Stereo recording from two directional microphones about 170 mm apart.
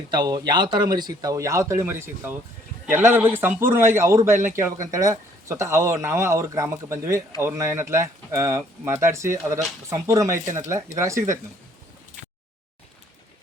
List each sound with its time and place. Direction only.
0.1 s speech: 25° right (ahead or behind)